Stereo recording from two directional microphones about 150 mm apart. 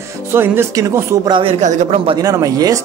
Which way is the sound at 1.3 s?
35° right (ahead or behind).